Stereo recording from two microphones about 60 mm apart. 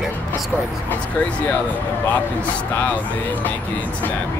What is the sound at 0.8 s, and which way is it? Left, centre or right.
Speech, left.